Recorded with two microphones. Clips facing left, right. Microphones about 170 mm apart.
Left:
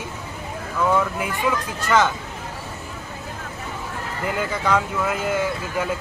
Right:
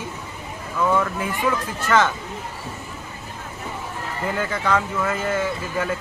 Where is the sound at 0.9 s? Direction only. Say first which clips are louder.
Left 1 dB; 5° left (ahead or behind).